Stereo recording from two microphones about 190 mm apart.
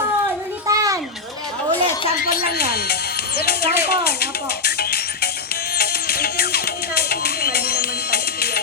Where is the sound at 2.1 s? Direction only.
50° left (ahead or behind).